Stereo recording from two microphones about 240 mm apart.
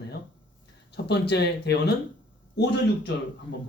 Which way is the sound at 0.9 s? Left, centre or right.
Left.